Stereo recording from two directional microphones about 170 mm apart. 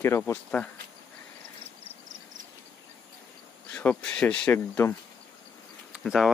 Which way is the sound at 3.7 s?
5° left (ahead or behind).